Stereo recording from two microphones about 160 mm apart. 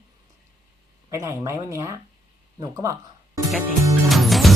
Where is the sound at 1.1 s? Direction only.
20° right (ahead or behind).